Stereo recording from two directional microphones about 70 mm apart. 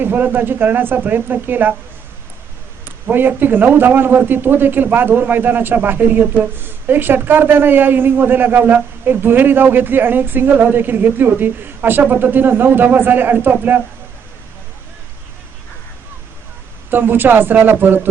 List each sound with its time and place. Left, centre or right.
0.0 s a man's voice: right
2.8 s a man's voice: right
16.9 s a man's voice: right